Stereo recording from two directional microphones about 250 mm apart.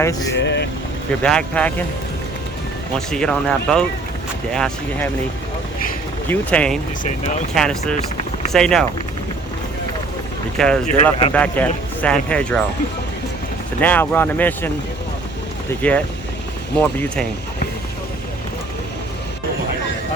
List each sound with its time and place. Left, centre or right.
0.0 s speech: centre
0.3 s speech: left
1.2 s speech: centre
3.1 s speech: centre
6.2 s speech: centre
10.6 s speech: centre
13.8 s speech: centre
15.8 s speech: centre